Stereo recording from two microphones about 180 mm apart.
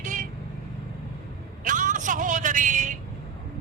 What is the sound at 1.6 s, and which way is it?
Vehicle, 45° right (ahead or behind).